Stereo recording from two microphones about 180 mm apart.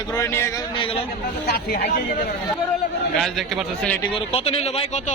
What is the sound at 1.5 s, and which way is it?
Speech, 60° left (ahead or behind).